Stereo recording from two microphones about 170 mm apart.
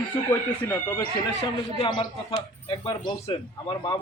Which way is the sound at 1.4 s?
30° left (ahead or behind).